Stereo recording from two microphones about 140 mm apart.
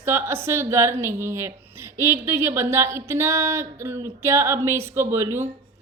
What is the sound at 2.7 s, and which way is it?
Female singing, 20° right (ahead or behind).